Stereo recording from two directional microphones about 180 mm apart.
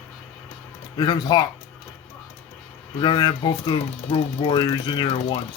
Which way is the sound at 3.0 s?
25° left (ahead or behind).